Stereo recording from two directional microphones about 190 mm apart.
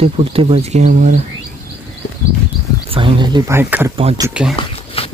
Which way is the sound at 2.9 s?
25° right (ahead or behind).